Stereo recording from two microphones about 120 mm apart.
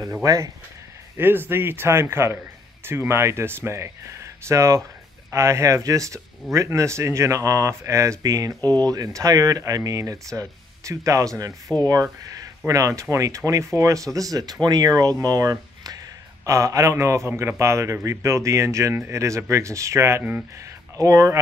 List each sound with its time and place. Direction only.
0.2 s a man's voice: 30° right (ahead or behind)
1.1 s a man's voice: 15° right (ahead or behind)
8.5 s speech: 15° left (ahead or behind)
8.8 s a man's voice: 30° right (ahead or behind)
21.0 s a man's voice: 25° right (ahead or behind)